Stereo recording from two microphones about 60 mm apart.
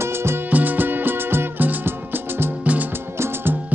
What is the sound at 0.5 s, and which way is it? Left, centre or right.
Music, right.